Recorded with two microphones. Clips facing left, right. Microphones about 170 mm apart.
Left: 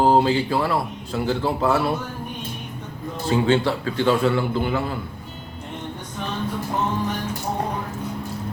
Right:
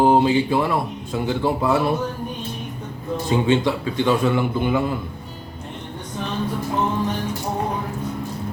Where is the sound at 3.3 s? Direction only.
20° right (ahead or behind).